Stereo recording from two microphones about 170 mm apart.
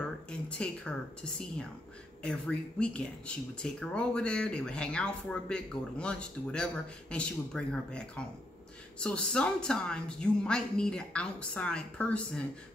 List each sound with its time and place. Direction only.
0.3 s speech: 5° left (ahead or behind)
9.0 s speech: 5° left (ahead or behind)